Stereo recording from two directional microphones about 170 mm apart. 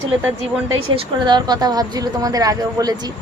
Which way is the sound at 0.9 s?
25° right (ahead or behind).